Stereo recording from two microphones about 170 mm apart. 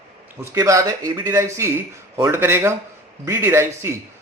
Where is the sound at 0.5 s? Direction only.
20° right (ahead or behind).